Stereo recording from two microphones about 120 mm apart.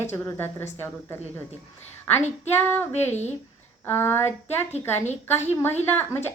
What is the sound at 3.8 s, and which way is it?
Speech, 20° left (ahead or behind).